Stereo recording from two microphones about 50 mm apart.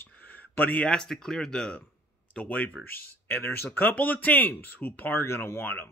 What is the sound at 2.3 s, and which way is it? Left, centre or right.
Speech, left.